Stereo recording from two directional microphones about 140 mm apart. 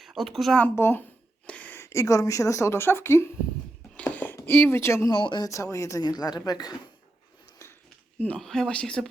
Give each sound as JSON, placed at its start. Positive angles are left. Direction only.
{"t": 0.0, "sound": "speech", "side_deg": 0}
{"t": 0.8, "sound": "speech", "side_deg": 15}
{"t": 3.9, "sound": "a sound", "side_deg": 10}
{"t": 4.4, "sound": "speech", "side_deg": 15}
{"t": 5.1, "sound": "speech", "side_deg": 35}
{"t": 8.2, "sound": "speech", "side_deg": 5}